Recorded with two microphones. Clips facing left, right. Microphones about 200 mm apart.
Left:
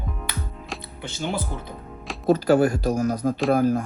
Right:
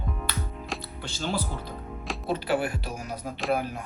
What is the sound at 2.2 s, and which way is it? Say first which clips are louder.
Speech: left 10 dB; 40° left (ahead or behind).